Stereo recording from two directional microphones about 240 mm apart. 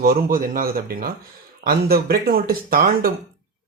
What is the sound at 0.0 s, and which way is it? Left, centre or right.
Speech, right.